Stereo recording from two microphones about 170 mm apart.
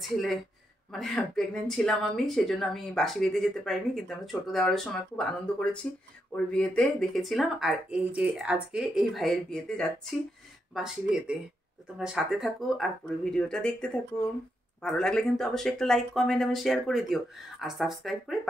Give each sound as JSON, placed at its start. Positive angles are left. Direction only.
{"t": 0.1, "sound": "speech", "side_deg": 0}